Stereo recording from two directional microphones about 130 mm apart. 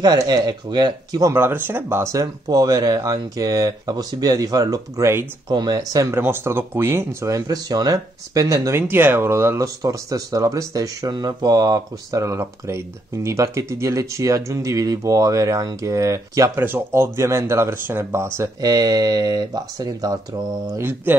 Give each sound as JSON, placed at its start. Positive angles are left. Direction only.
{"t": 0.0, "sound": "speech", "side_deg": -30}
{"t": 20.7, "sound": "mantra", "side_deg": -15}